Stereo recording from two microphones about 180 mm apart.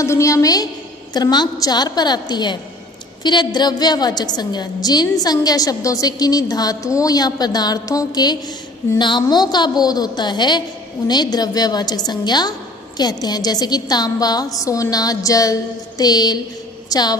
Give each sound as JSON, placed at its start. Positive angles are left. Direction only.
{"t": 0.0, "sound": "a woman's voice", "side_deg": 15}